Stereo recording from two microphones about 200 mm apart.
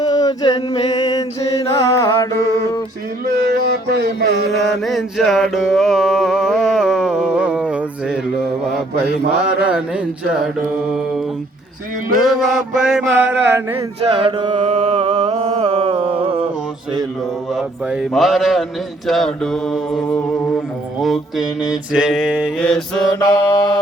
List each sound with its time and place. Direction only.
0.0 s mantra: 20° left (ahead or behind)
3.2 s music: 50° right (ahead or behind)
4.5 s music: centre (ahead or behind)
9.4 s speech: 5° right (ahead or behind)
12.2 s speech: centre (ahead or behind)
13.3 s a sound: 10° right (ahead or behind)
13.7 s mantra: 30° right (ahead or behind)
17.5 s speech: 5° right (ahead or behind)
22.5 s speech: 5° left (ahead or behind)
23.2 s mantra: 20° left (ahead or behind)